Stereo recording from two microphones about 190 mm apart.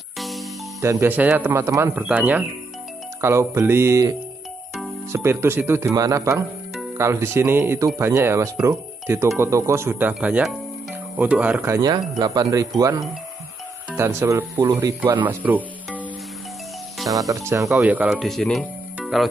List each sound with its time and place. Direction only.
0.2 s music: centre (ahead or behind)
0.7 s speech: 15° right (ahead or behind)
5.1 s speech: 15° right (ahead or behind)
17.1 s speech: 15° right (ahead or behind); by 18.7 s 5° left (ahead or behind)
18.9 s music: centre (ahead or behind)